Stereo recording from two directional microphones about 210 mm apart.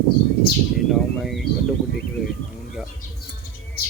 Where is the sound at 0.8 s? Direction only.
Centre (ahead or behind).